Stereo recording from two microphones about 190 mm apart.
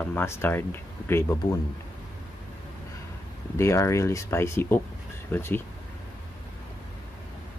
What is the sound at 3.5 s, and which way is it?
Speech, 15° left (ahead or behind).